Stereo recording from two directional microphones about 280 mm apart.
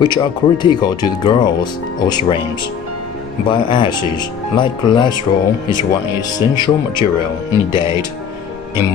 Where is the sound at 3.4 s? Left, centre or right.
Centre.